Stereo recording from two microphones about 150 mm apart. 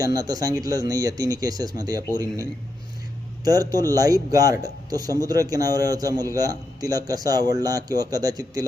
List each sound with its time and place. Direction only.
0.0 s a man's voice: 25° right (ahead or behind)